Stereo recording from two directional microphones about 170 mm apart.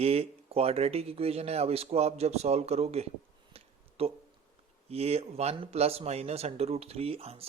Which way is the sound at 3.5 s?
35° right (ahead or behind).